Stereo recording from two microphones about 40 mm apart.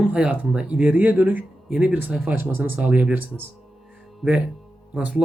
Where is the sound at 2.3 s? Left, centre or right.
Right.